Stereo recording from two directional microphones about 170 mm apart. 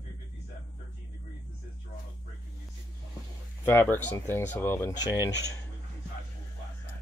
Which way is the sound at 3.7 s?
15° left (ahead or behind).